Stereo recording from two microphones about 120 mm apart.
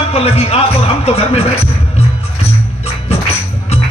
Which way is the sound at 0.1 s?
55° left (ahead or behind).